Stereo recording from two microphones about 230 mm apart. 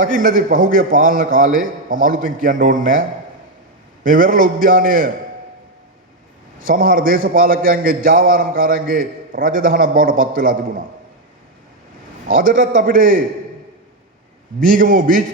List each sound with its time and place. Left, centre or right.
0.0 s a man's voice: right
4.0 s a man's voice: right
6.6 s a man's voice: right
12.3 s a man's voice: right
14.7 s a man's voice: right